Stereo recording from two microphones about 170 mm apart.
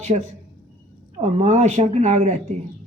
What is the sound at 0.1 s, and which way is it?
Speech, 35° right (ahead or behind).